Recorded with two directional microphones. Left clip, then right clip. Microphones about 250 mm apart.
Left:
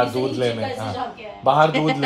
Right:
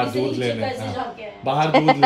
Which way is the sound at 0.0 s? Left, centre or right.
Centre.